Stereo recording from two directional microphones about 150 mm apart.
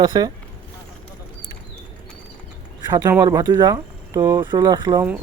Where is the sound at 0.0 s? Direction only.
25° right (ahead or behind).